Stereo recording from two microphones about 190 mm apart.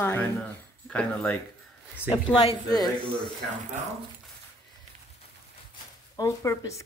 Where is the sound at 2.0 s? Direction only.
25° left (ahead or behind).